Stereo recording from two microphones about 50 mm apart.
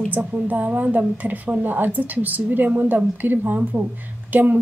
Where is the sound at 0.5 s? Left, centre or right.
Right.